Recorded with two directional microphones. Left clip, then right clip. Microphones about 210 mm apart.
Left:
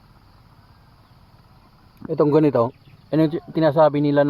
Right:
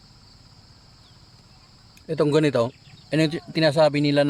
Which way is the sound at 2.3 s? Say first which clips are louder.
Left 3 dB; 15° left (ahead or behind).